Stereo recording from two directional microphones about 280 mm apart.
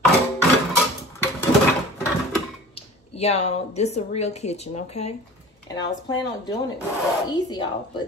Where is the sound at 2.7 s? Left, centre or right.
Left.